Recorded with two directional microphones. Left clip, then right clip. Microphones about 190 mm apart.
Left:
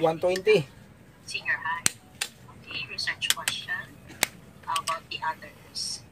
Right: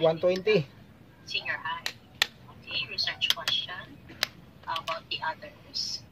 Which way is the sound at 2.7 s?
45° right (ahead or behind).